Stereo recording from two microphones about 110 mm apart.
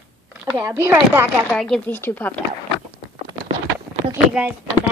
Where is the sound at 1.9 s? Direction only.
15° left (ahead or behind).